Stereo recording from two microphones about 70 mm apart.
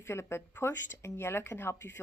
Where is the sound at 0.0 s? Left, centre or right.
Left.